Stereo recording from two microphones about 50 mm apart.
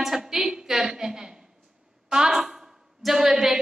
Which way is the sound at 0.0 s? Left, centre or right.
Centre.